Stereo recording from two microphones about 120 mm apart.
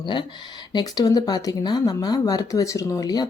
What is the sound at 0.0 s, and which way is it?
Speech, 40° left (ahead or behind).